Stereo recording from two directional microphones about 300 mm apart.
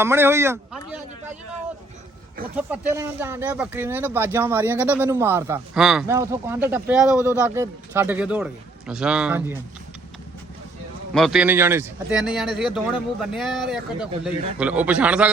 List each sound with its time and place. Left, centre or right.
0.0 s speech: centre
2.6 s a man's voice: centre
11.1 s a man's voice: centre